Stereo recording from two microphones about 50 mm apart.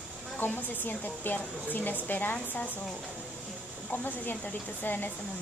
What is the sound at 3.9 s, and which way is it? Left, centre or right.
Speech, left.